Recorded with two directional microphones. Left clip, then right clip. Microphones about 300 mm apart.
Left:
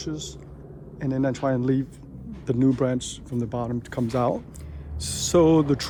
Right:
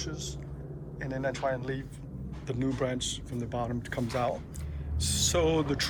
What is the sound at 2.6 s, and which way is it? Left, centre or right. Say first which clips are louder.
Speech: left 8 dB; centre.